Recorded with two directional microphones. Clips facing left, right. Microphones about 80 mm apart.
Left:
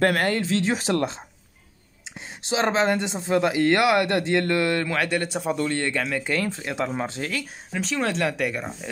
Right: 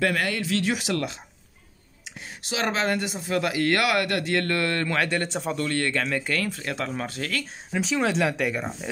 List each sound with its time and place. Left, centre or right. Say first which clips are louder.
0.0 s speech: left 4 dB; left; by 4.8 s centre
4.8 s a man's voice: left 1 dB; centre
7.7 s speech: right 1 dB; centre